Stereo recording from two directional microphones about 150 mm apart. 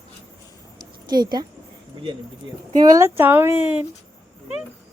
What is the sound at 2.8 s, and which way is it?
A woman's voice, 20° right (ahead or behind).